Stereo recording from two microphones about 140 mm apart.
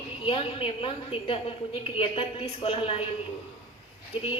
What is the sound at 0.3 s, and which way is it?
A woman's voice, 40° left (ahead or behind).